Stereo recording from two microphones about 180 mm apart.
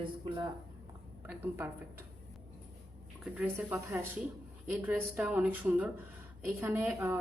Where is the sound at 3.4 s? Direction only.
10° right (ahead or behind).